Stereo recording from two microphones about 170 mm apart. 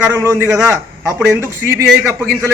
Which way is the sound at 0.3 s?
15° right (ahead or behind).